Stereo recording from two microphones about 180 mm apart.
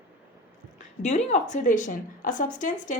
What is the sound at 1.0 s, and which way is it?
Speech, 40° left (ahead or behind).